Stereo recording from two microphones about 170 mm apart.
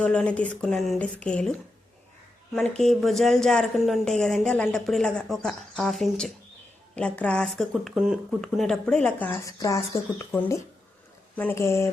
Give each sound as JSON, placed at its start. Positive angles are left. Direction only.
{"t": 0.0, "sound": "speech", "side_deg": 5}
{"t": 2.6, "sound": "speech", "side_deg": 0}